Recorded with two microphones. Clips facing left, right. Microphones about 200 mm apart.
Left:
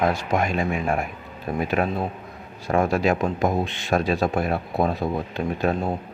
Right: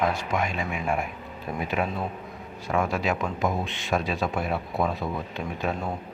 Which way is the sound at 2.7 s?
40° left (ahead or behind).